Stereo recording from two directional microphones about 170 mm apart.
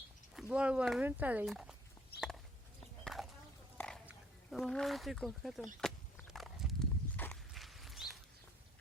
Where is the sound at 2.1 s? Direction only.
70° left (ahead or behind).